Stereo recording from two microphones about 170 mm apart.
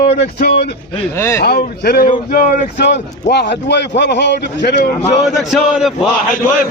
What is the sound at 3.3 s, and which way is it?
Speech, 90° left.